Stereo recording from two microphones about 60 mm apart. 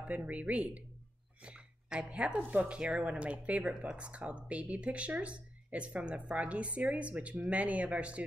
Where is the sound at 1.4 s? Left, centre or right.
Centre.